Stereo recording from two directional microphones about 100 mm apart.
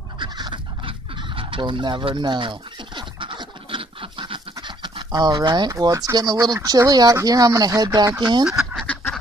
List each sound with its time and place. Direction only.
0.2 s fowl: 50° right (ahead or behind)
5.7 s speech: 35° right (ahead or behind)